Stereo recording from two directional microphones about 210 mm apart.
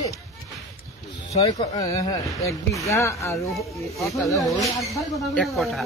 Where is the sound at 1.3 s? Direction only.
25° left (ahead or behind).